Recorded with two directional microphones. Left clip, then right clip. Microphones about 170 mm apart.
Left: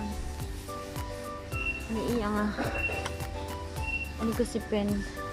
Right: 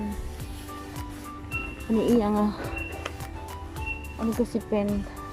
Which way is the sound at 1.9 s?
25° right (ahead or behind).